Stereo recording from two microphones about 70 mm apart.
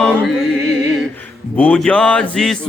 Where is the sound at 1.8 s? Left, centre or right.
Centre.